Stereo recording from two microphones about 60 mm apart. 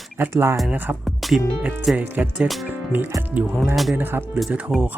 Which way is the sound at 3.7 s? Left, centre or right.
Centre.